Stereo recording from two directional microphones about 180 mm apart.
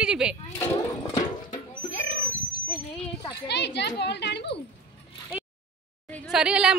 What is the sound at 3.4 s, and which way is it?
A child's voice, 70° left (ahead or behind).